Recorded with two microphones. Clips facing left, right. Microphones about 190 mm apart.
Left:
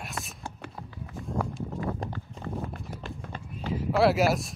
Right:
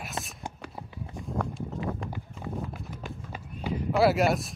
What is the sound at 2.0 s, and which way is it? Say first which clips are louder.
Clip-clop: even; 10° right (ahead or behind).